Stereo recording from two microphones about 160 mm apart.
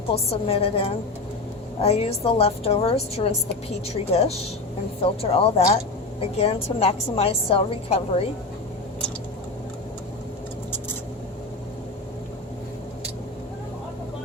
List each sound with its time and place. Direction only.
0.1 s a woman's voice: 35° left (ahead or behind)